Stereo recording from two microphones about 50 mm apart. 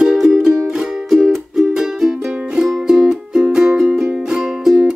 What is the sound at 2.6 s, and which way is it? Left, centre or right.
Music, centre.